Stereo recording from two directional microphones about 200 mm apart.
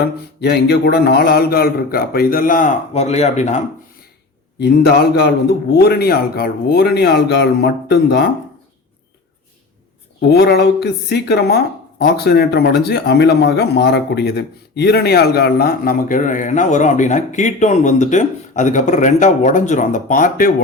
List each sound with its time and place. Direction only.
0.0 s speech: 55° left (ahead or behind); by 3.6 s 35° left (ahead or behind)
4.6 s speech: 50° left (ahead or behind)
10.2 s speech: 55° left (ahead or behind)